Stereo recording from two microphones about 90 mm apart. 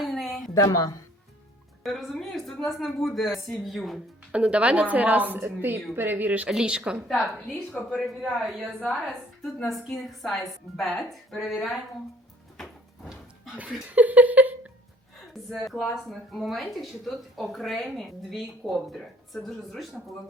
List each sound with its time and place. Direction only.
0.0 s a sound: centre (ahead or behind)
0.5 s a woman's voice: 35° left (ahead or behind)
1.8 s speech: centre (ahead or behind)
4.3 s a woman's voice: 10° right (ahead or behind)
7.7 s speech: 10° left (ahead or behind)
8.0 s speech: centre (ahead or behind)
12.5 s door: centre (ahead or behind)
13.8 s speech: 15° right (ahead or behind)
15.3 s speech: centre (ahead or behind)